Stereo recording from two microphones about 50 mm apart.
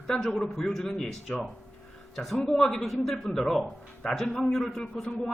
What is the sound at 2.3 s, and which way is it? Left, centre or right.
A man's voice, centre.